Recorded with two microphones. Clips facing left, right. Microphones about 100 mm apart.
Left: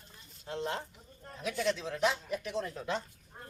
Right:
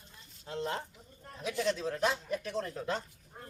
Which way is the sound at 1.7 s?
35° right (ahead or behind).